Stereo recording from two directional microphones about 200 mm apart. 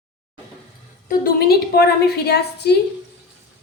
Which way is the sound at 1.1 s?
50° left (ahead or behind).